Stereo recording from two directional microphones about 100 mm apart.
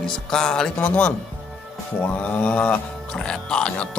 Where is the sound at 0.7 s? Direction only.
15° left (ahead or behind).